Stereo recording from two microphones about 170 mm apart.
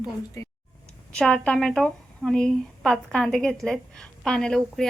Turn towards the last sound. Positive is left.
turn(degrees=5)  # may be behind; listen again after turning